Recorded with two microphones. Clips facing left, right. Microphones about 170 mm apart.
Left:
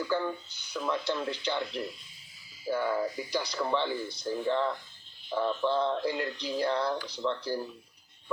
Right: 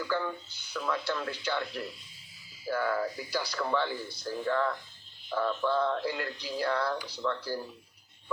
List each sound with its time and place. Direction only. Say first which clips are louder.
0.1 s speech: left 2 dB; 15° left (ahead or behind)